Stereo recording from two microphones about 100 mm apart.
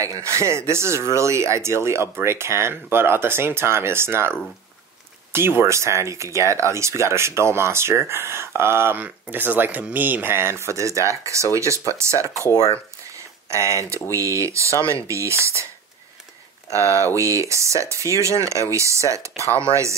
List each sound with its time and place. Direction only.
0.0 s speech: 30° right (ahead or behind)
12.4 s speech: 30° left (ahead or behind)
13.1 s a sound: 30° right (ahead or behind)
13.7 s speech: 30° right (ahead or behind)
16.7 s speech: 30° right (ahead or behind)